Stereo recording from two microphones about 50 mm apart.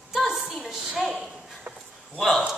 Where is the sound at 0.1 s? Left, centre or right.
Centre.